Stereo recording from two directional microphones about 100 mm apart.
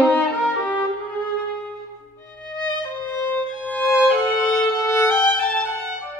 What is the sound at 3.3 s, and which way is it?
Music, 15° left (ahead or behind).